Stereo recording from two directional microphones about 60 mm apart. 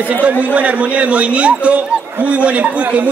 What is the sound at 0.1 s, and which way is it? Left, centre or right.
A man's voice, right.